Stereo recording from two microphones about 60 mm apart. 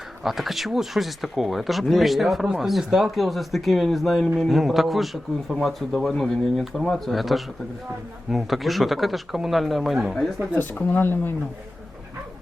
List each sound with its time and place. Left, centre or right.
0.2 s speech: centre
10.5 s speech: left